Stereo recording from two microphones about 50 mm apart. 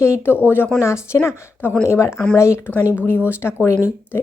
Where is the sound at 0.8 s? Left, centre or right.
Left.